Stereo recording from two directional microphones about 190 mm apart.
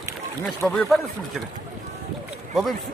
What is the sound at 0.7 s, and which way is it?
Speech, centre (ahead or behind).